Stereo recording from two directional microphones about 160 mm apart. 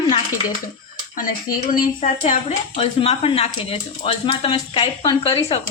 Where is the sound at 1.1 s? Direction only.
55° left (ahead or behind).